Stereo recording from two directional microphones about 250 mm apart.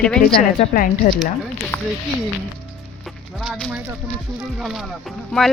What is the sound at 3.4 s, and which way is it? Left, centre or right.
Speech, centre.